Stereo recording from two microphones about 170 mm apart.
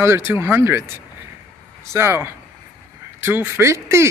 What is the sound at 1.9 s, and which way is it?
Speech, 15° right (ahead or behind).